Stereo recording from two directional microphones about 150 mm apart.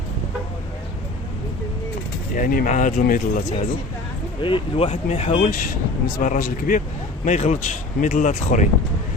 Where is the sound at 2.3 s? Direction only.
65° left (ahead or behind).